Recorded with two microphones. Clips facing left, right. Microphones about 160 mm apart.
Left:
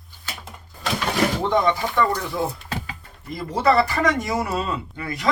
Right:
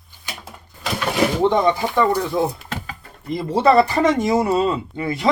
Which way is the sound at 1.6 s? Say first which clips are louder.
Right 3 dB; 20° right (ahead or behind).